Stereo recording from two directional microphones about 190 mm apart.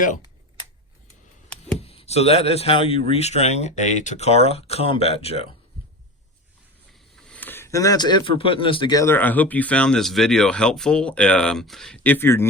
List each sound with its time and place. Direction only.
1.8 s speech: 30° left (ahead or behind)
7.2 s speech: 5° left (ahead or behind)